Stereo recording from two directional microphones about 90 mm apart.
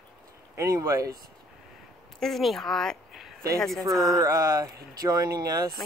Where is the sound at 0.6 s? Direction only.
35° right (ahead or behind).